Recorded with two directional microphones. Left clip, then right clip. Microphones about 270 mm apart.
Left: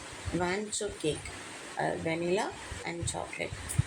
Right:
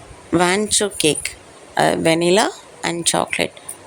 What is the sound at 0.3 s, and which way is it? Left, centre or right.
Speech, right.